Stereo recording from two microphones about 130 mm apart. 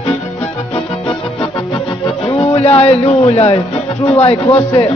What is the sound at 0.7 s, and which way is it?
Music, 45° left (ahead or behind).